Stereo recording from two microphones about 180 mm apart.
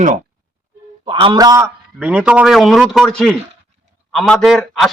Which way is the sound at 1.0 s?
25° right (ahead or behind).